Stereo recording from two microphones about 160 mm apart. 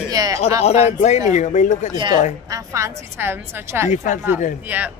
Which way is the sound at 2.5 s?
20° right (ahead or behind).